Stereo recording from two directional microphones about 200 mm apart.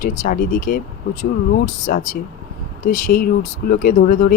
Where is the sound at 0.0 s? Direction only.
45° left (ahead or behind).